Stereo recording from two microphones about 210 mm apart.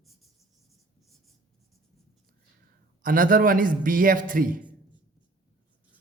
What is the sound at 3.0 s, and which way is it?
A man's voice, 40° right (ahead or behind).